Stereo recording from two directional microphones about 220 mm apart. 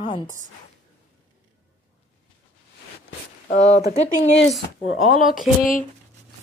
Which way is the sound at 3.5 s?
30° left (ahead or behind).